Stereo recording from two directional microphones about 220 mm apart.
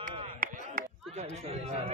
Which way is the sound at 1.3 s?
30° right (ahead or behind).